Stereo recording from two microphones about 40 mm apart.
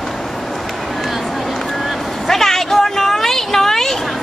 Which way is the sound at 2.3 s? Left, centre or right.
Centre.